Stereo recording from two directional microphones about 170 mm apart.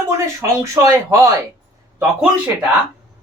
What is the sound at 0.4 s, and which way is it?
Speech, 15° right (ahead or behind).